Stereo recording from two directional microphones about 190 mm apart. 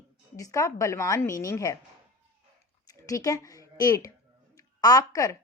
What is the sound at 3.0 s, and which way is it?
Speech, 15° left (ahead or behind).